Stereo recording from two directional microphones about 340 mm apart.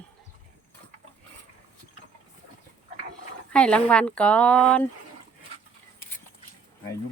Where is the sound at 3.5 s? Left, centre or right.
Centre.